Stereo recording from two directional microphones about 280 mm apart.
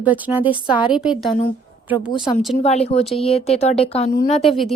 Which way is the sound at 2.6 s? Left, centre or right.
Left.